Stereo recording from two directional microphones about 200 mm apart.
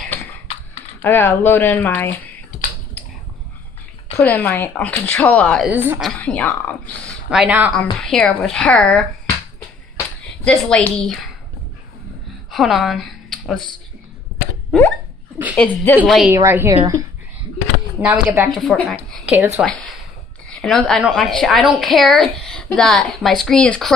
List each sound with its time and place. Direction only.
0.0 s typing: 10° left (ahead or behind)
1.0 s speech: 10° left (ahead or behind)
4.2 s speech: 10° left (ahead or behind)
5.7 s a woman's voice: 10° right (ahead or behind)
6.0 s speech: 5° left (ahead or behind)
7.2 s a woman's voice: 5° right (ahead or behind)
10.4 s a woman's voice: 5° left (ahead or behind)
12.4 s a woman's voice: centre (ahead or behind)
14.7 s a woman's voice: centre (ahead or behind)
16.3 s a woman's voice: 10° right (ahead or behind)
18.0 s a woman's voice: 10° right (ahead or behind)
18.5 s a woman's voice: centre (ahead or behind)
19.6 s a woman's voice: 5° left (ahead or behind)